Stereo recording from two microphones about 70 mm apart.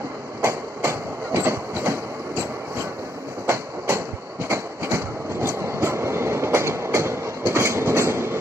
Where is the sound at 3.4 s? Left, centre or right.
Right.